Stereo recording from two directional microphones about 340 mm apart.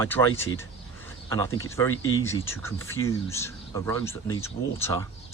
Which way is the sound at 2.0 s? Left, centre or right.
Left.